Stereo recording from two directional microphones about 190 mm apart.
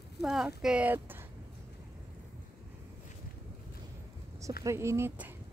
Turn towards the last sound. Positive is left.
turn(degrees=-15)  # may be behind; listen again after turning